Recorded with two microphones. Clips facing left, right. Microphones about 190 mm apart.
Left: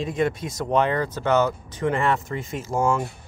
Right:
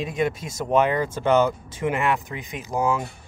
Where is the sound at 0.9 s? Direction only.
15° right (ahead or behind).